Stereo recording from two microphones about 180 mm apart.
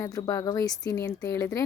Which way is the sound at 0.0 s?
20° left (ahead or behind).